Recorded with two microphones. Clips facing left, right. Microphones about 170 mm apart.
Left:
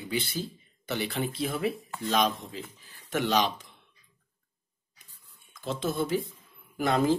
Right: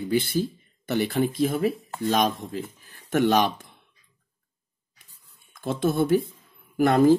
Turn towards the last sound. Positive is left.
turn(degrees=-55)  # may be behind; listen again after turning